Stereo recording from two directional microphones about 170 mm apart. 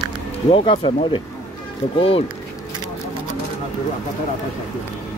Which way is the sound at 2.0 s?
35° left (ahead or behind).